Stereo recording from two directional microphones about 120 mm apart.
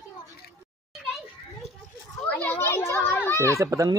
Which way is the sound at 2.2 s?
10° left (ahead or behind).